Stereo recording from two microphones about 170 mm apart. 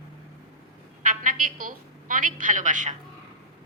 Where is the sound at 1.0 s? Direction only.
55° right (ahead or behind).